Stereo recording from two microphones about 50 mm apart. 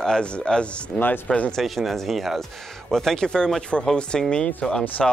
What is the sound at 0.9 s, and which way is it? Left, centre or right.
Speech, left.